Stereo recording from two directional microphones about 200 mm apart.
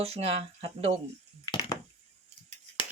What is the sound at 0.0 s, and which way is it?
Speech, 30° right (ahead or behind).